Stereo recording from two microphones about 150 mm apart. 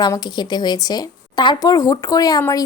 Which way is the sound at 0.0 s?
30° left (ahead or behind).